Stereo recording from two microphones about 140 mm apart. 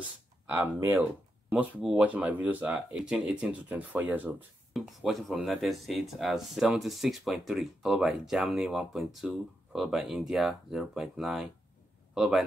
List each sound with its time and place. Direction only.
0.5 s speech: 15° right (ahead or behind)
4.7 s speech: centre (ahead or behind)